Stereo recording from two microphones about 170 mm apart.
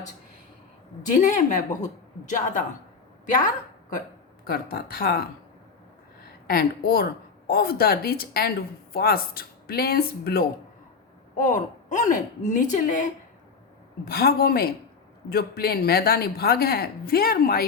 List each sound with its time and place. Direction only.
1.2 s a woman's voice: 45° left (ahead or behind)
4.4 s a woman's voice: 60° left (ahead or behind)
6.5 s a woman's voice: 60° left (ahead or behind)
11.3 s a woman's voice: 45° left (ahead or behind)
14.0 s a woman's voice: 65° left (ahead or behind)